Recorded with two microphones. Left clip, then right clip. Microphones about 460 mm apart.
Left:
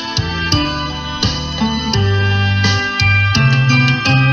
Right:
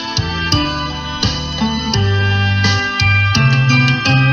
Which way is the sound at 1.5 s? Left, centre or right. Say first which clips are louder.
Left 1 dB; left.